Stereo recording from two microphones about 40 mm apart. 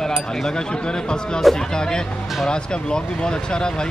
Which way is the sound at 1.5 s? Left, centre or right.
Centre.